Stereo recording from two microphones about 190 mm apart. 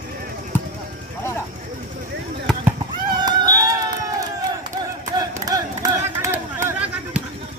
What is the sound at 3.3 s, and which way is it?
Run, 20° right (ahead or behind).